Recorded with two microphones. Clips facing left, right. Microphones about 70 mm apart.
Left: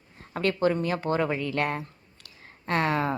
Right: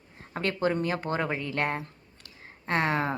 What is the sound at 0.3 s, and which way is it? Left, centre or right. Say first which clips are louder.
A woman's voice: left 3 dB; right.